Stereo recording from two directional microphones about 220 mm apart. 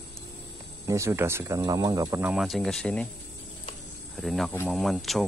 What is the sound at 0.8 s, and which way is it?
Speech, 15° right (ahead or behind).